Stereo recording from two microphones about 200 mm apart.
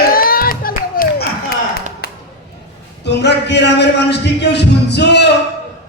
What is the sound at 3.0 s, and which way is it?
A man's voice, 60° left (ahead or behind).